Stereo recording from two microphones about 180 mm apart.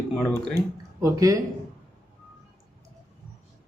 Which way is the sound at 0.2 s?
5° left (ahead or behind).